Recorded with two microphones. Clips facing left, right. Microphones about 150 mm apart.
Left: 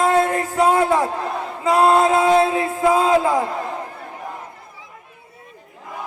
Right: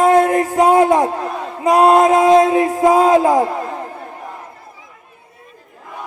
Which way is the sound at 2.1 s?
40° right (ahead or behind).